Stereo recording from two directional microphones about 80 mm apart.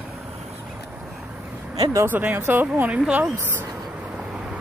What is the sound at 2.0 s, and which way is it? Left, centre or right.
Speech, right.